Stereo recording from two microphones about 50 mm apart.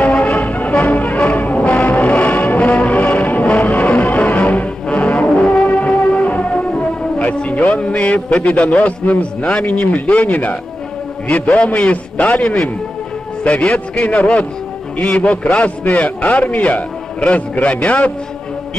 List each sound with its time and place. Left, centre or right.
0.3 s music: left
3.6 s brass instrument: left
7.2 s a sound: left
8.8 s a man's voice: left